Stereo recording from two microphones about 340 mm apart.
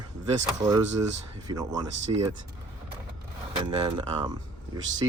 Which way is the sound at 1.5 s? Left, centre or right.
Centre.